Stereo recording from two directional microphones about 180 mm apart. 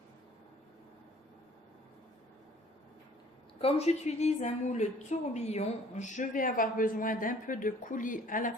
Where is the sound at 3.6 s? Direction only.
35° left (ahead or behind).